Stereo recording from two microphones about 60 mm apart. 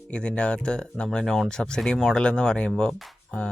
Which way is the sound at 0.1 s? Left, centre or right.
Centre.